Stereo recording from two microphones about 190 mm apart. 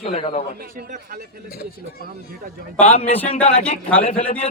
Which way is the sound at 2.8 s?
35° left (ahead or behind).